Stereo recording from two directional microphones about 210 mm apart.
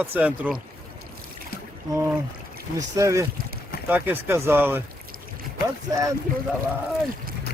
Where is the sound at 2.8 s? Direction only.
15° right (ahead or behind).